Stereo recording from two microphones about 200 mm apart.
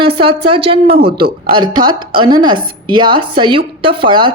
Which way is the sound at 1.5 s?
20° right (ahead or behind).